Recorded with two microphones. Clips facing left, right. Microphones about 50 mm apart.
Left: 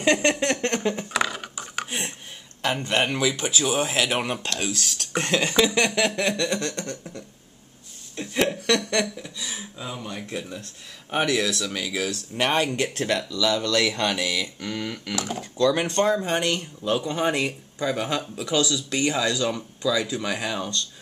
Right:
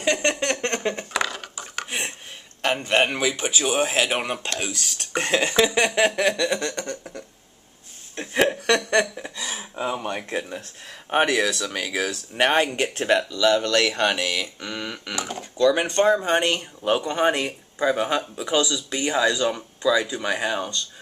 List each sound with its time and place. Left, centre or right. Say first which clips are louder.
0.5 s a sound: left 1 dB; centre
1.2 s a sound: left 1 dB; centre
2.6 s a sound: right 3 dB; right
3.9 s speech: right 1 dB; centre
6.7 s speech: right 2 dB; right
8.4 s chuckle: right 2 dB; right
9.4 s speech: right 7 dB; right
12.1 s speech: right 4 dB; right
14.2 s speech: right 1 dB; centre
14.6 s a sound: left 1 dB; right
15.1 s speech: left 1 dB; centre
15.6 s speech: right 2 dB; centre